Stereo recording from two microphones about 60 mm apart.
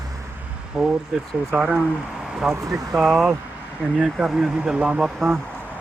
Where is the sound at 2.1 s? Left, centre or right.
Centre.